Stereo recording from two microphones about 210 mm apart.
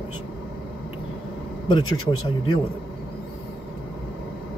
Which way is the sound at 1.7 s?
20° left (ahead or behind).